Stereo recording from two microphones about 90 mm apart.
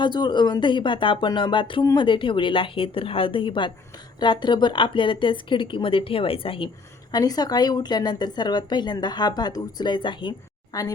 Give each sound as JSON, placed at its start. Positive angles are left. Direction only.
{"t": 0.0, "sound": "a woman's voice", "side_deg": 55}
{"t": 7.1, "sound": "a woman's voice", "side_deg": 45}
{"t": 10.7, "sound": "a woman's voice", "side_deg": 45}